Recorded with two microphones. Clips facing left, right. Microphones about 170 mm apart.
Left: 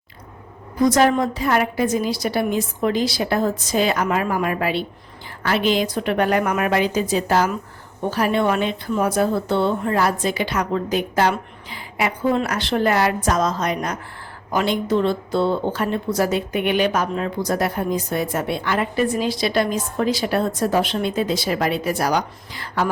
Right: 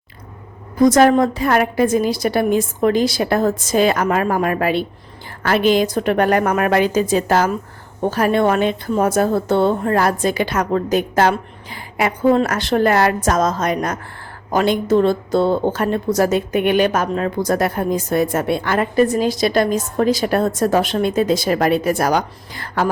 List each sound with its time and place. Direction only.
0.8 s speech: 50° right (ahead or behind)